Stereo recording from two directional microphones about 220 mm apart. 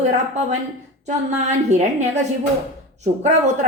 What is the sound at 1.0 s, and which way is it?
Speech, 30° right (ahead or behind).